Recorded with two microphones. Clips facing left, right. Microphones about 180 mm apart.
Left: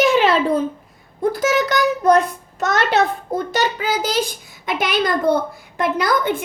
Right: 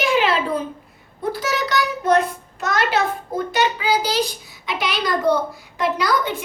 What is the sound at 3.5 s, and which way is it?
A child's voice, 45° left (ahead or behind).